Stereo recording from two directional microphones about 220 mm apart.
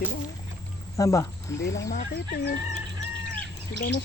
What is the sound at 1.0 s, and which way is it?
Speech, 15° left (ahead or behind).